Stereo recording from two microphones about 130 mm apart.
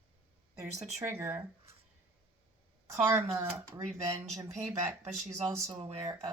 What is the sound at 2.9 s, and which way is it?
Speech, 20° right (ahead or behind).